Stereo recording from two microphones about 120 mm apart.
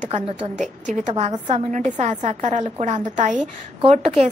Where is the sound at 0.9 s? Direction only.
70° right (ahead or behind).